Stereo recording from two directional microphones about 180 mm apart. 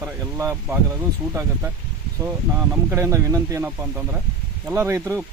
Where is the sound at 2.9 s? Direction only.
15° right (ahead or behind).